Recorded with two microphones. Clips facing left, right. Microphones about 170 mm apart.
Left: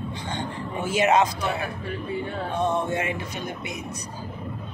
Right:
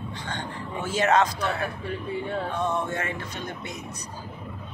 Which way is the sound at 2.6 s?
20° left (ahead or behind).